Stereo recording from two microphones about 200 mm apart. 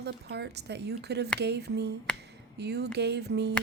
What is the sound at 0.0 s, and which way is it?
Speech, 55° right (ahead or behind).